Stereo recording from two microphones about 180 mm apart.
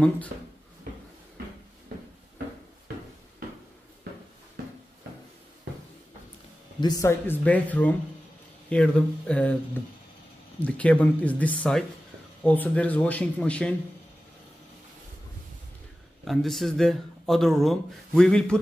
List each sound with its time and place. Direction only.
6.8 s speech: 20° left (ahead or behind)
16.3 s speech: centre (ahead or behind)